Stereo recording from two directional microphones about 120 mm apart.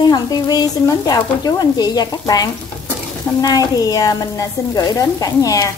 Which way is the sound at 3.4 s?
30° left (ahead or behind).